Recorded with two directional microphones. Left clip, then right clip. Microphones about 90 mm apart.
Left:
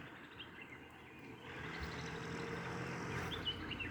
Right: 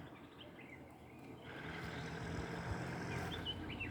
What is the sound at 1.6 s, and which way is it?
Vehicle, 25° right (ahead or behind).